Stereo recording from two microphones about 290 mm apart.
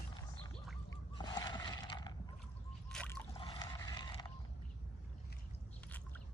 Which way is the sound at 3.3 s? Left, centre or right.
Centre.